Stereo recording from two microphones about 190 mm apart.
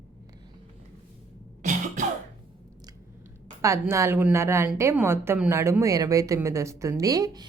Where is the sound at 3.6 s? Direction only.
15° right (ahead or behind).